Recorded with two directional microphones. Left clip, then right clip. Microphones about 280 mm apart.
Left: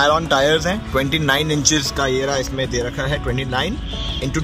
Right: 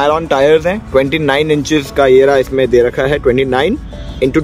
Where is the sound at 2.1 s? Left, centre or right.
Centre.